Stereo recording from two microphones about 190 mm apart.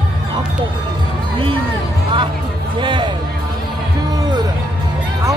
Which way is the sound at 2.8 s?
25° right (ahead or behind).